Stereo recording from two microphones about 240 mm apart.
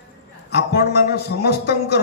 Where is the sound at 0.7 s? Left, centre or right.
Left.